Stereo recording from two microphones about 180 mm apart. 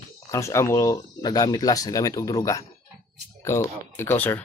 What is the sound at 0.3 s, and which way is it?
Speech, 15° left (ahead or behind).